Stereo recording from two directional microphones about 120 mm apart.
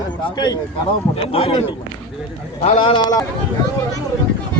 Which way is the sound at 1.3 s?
50° left (ahead or behind).